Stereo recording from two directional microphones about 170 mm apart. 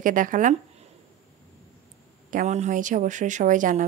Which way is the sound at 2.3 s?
45° right (ahead or behind).